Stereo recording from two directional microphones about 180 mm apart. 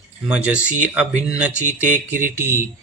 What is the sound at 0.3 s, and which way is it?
Mantra, 5° right (ahead or behind).